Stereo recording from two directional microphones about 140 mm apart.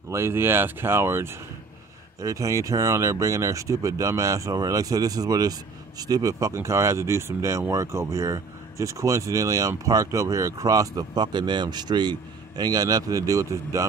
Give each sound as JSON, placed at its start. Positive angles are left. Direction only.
{"t": 0.1, "sound": "speech", "side_deg": -20}